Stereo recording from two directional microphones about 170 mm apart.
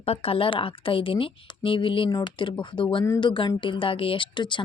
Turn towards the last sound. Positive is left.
turn(degrees=25)  # may be behind; listen again after turning